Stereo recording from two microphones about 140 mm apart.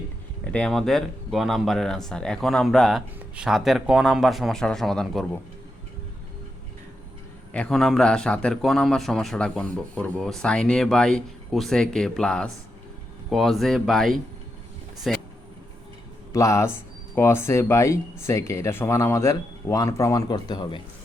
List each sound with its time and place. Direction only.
0.4 s a man's voice: 5° left (ahead or behind)
7.5 s a man's voice: 5° left (ahead or behind)
16.3 s speech: 20° left (ahead or behind)